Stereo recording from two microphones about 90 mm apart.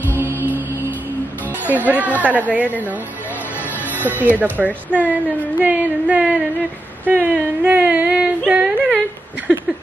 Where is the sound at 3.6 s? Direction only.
20° left (ahead or behind).